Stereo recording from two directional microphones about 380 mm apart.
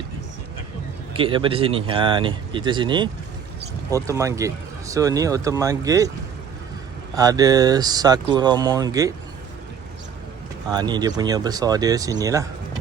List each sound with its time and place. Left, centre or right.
1.1 s speech: centre
7.2 s speech: centre
10.7 s speech: centre